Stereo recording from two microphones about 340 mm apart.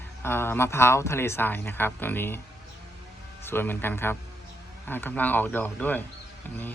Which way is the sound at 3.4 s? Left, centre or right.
Centre.